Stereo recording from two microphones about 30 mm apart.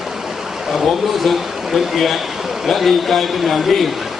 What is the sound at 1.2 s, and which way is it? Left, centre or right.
A man's voice, centre.